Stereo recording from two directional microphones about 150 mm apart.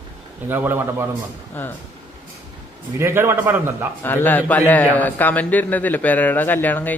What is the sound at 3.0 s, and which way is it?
Speech, 15° right (ahead or behind).